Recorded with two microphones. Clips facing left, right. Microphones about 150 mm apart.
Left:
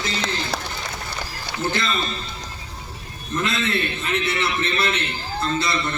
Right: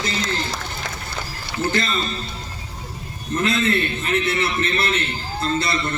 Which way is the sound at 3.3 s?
45° right (ahead or behind).